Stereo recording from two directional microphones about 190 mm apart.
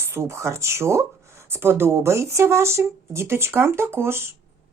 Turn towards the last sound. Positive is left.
turn(degrees=-10)  # may be behind; listen again after turning